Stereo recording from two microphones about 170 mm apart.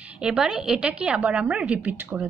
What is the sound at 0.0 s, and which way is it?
A woman's voice, 5° right (ahead or behind).